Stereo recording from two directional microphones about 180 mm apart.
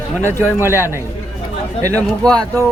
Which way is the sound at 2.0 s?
5° left (ahead or behind).